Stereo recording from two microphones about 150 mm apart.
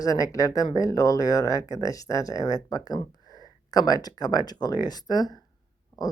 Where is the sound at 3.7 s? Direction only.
25° left (ahead or behind).